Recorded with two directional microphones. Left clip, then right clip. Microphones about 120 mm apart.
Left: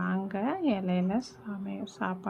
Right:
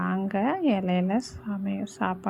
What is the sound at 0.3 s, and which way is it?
A woman's voice, 40° right (ahead or behind).